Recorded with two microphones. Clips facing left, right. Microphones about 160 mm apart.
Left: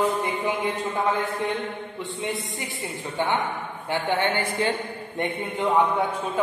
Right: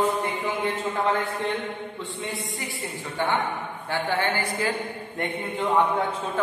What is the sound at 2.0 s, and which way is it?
A woman's voice, 20° left (ahead or behind).